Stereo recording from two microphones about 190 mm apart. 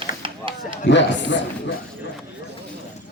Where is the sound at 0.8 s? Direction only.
70° left (ahead or behind).